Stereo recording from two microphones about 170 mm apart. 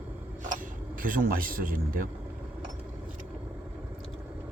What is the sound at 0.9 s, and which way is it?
A man's voice, 55° right (ahead or behind).